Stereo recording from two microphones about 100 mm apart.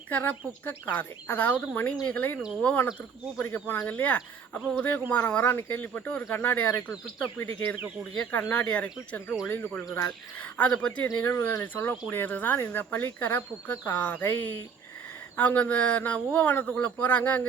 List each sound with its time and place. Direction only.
0.1 s speech: 20° left (ahead or behind)
11.1 s speech: 25° left (ahead or behind)
11.6 s speech: 15° left (ahead or behind)